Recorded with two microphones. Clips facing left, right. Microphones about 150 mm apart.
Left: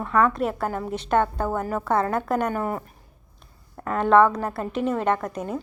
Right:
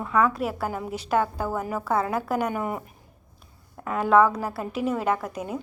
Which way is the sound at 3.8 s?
5° right (ahead or behind).